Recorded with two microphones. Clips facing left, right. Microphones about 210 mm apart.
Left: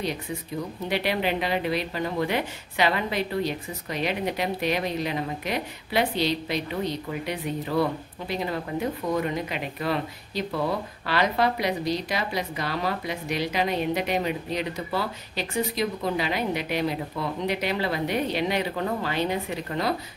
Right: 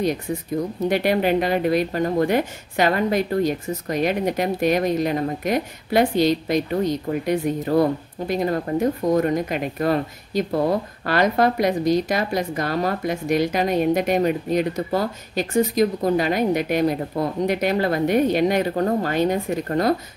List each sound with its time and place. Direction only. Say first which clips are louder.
0.6 s speech: right 7 dB; 45° right (ahead or behind)